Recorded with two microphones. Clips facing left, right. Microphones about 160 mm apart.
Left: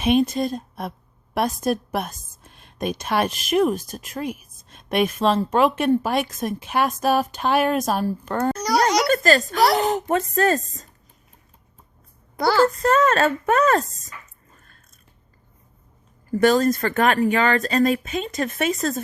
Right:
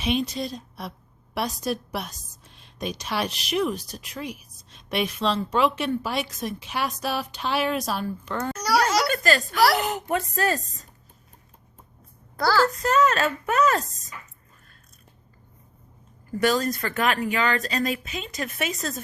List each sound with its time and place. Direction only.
0.0 s a woman's voice: 50° left (ahead or behind)
9.0 s a sound: 45° left (ahead or behind)
9.6 s speech: 25° left (ahead or behind)
10.2 s a woman's voice: 45° left (ahead or behind)
12.4 s speech: 25° left (ahead or behind)
13.0 s a woman's voice: 50° left (ahead or behind)
16.4 s a woman's voice: 50° left (ahead or behind)